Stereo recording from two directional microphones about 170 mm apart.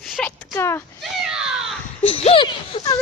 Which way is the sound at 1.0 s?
Centre (ahead or behind).